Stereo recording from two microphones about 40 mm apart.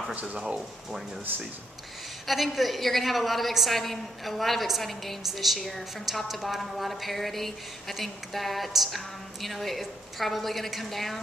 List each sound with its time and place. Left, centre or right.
0.1 s speech: right
2.2 s a woman's voice: centre